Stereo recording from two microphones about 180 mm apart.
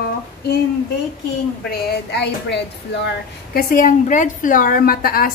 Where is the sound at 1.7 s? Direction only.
70° left (ahead or behind).